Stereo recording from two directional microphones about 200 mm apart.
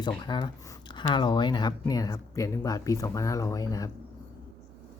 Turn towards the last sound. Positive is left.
turn(degrees=15)  # may be behind; listen again after turning